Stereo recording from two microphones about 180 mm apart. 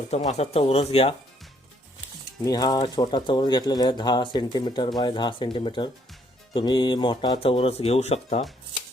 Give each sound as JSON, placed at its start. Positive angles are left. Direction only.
{"t": 0.1, "sound": "speech", "side_deg": 40}
{"t": 2.4, "sound": "speech", "side_deg": 20}